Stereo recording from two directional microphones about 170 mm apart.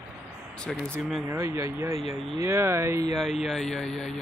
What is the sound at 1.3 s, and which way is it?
Speech, 15° right (ahead or behind).